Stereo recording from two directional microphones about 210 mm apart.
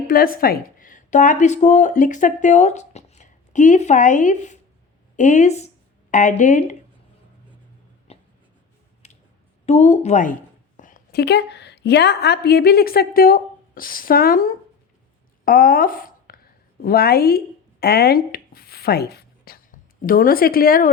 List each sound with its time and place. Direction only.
0.1 s a woman's voice: 45° left (ahead or behind)
8.1 s writing: 30° left (ahead or behind)
9.0 s clicking: 30° left (ahead or behind)
9.6 s a woman's voice: 30° left (ahead or behind)